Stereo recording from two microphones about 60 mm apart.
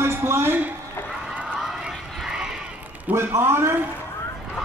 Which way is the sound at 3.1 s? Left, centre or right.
Right.